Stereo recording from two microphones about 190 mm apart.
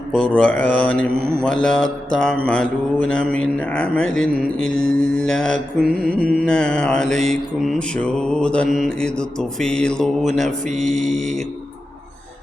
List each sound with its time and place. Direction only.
0.3 s mantra: 5° left (ahead or behind)
5.9 s music: 50° right (ahead or behind)
6.4 s mantra: 5° left (ahead or behind)